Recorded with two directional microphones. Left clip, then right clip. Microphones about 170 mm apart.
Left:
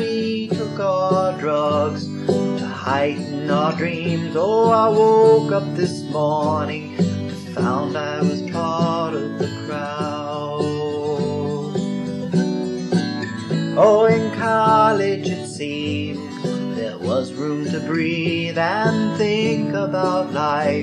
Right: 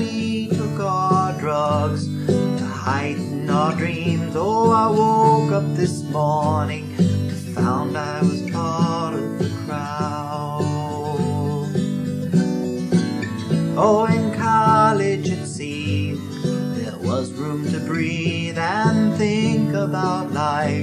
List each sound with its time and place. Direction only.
0.0 s music: 35° right (ahead or behind)
0.9 s music: 45° right (ahead or behind)
3.4 s music: 45° right (ahead or behind)
8.3 s music: 40° right (ahead or behind)
12.4 s music: 45° right (ahead or behind)
17.9 s music: 35° right (ahead or behind)